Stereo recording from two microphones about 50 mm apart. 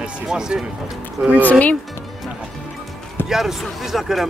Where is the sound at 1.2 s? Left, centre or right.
Right.